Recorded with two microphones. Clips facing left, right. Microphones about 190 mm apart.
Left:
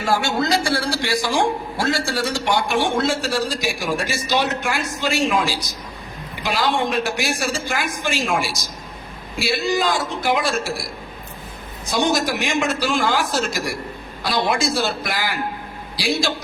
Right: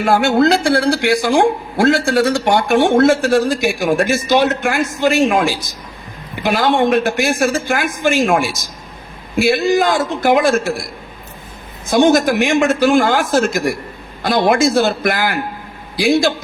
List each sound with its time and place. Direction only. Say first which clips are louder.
0.0 s a man's voice: right 8 dB; 55° right (ahead or behind)
11.9 s a man's voice: right 8 dB; 50° right (ahead or behind)